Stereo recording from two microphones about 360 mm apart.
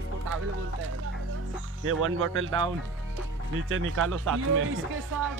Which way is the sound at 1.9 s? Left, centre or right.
Right.